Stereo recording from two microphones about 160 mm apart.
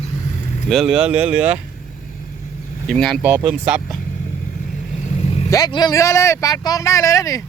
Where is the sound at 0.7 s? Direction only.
Centre (ahead or behind).